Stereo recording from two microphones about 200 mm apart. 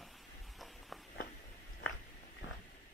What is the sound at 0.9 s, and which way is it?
Walk, centre (ahead or behind).